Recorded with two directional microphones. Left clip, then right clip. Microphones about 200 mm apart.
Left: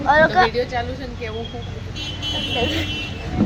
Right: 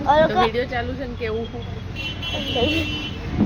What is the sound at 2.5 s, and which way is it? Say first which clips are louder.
Speech: right 3 dB; 25° right (ahead or behind).